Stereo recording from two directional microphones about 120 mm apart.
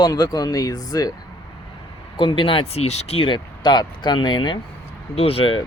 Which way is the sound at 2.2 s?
45° left (ahead or behind).